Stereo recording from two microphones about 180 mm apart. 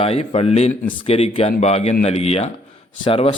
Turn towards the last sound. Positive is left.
turn(degrees=30)  # may be behind; listen again after turning